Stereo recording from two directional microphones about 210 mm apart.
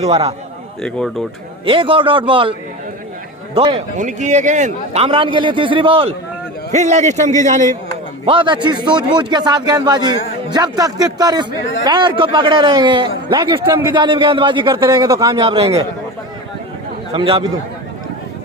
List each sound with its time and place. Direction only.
0.0 s a man's voice: 30° right (ahead or behind)
0.8 s speech: 5° left (ahead or behind)
1.6 s a man's voice: 25° right (ahead or behind)
3.9 s a man's voice: 35° right (ahead or behind)
8.2 s a man's voice: 25° right (ahead or behind)
17.2 s a man's voice: 25° right (ahead or behind)